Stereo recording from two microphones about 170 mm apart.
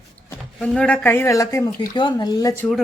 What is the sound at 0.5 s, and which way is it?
Speech, 5° left (ahead or behind).